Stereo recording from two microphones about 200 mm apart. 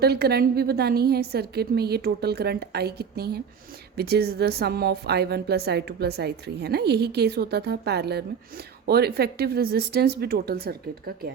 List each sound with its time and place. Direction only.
0.0 s a woman's voice: 50° right (ahead or behind)